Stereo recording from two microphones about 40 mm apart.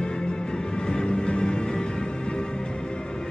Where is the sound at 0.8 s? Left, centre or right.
Left.